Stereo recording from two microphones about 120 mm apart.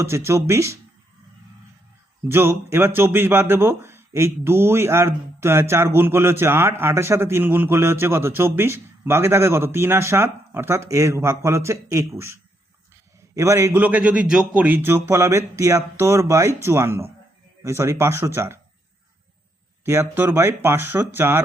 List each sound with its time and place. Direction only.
0.0 s speech: 20° right (ahead or behind)
2.3 s speech: 20° right (ahead or behind)
19.8 s speech: 20° right (ahead or behind)